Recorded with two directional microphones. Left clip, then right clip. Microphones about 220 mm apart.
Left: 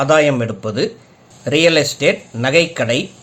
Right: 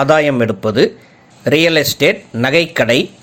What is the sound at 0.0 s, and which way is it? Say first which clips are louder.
Speech: right 1 dB; 25° right (ahead or behind).